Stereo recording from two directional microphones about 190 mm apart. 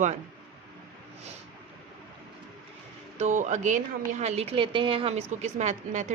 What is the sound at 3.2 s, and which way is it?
Speech, 40° right (ahead or behind).